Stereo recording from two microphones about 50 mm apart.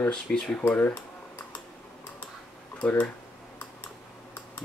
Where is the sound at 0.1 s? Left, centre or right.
Centre.